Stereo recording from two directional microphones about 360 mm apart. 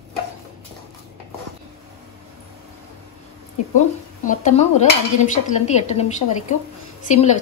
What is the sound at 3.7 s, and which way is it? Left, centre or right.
Speech, left.